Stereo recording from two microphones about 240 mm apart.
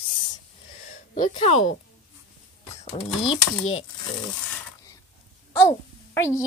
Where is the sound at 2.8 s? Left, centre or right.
Left.